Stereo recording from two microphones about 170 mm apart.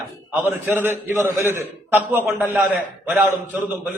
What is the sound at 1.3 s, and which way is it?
Speech, 15° right (ahead or behind).